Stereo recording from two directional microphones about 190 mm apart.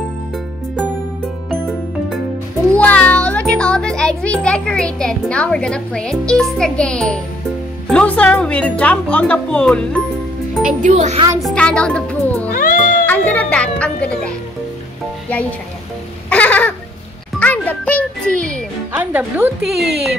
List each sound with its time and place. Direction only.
2.7 s music: 10° left (ahead or behind)
3.5 s a child's voice: 5° left (ahead or behind)
10.8 s speech: 35° right (ahead or behind)
11.3 s a child's voice: 5° left (ahead or behind)
12.5 s cat: 45° left (ahead or behind)
13.0 s music: 10° left (ahead or behind)
16.3 s a sound: 10° left (ahead or behind)
17.4 s music: 5° left (ahead or behind)
18.9 s a child's voice: 10° right (ahead or behind)